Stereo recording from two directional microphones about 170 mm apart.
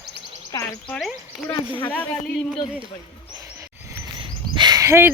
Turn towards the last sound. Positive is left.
turn(degrees=-15)  # may be behind; listen again after turning